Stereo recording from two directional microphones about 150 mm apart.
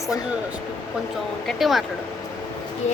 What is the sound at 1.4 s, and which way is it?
Speech, centre (ahead or behind).